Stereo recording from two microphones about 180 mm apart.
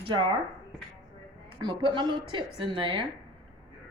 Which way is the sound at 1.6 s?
25° right (ahead or behind).